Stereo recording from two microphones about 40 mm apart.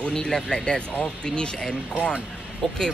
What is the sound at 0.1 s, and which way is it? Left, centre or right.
Speech, centre.